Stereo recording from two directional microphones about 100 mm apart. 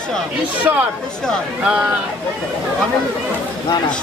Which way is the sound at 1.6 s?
15° right (ahead or behind).